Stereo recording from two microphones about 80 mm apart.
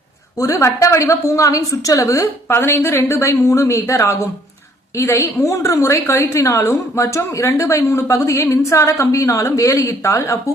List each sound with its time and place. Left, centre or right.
0.3 s a woman's voice: left
2.5 s a woman's voice: left